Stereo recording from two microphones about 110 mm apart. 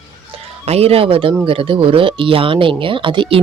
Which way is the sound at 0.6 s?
65° right (ahead or behind).